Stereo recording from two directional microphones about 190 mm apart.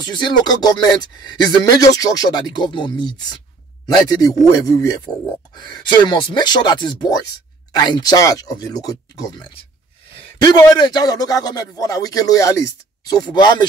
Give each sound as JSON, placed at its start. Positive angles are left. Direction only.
{"t": 0.0, "sound": "speech", "side_deg": 25}
{"t": 10.1, "sound": "a sound", "side_deg": 20}
{"t": 10.8, "sound": "speech", "side_deg": 20}